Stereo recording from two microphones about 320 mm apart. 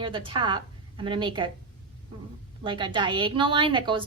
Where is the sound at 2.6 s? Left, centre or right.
Centre.